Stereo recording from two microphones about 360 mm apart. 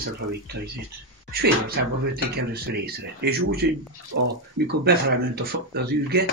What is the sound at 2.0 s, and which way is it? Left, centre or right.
Speech, right.